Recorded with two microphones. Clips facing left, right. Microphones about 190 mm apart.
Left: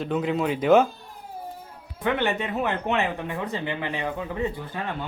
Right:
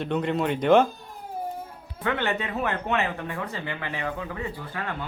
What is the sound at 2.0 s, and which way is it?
Speech, 15° left (ahead or behind).